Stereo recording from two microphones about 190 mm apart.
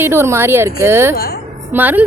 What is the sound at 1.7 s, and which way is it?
Speech, 10° right (ahead or behind).